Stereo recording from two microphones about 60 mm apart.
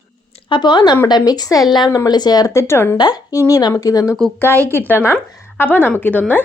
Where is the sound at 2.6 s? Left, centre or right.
Left.